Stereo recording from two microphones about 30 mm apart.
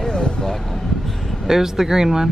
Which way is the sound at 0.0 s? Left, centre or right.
Left.